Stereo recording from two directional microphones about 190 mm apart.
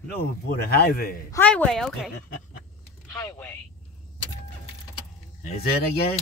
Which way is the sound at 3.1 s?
15° left (ahead or behind).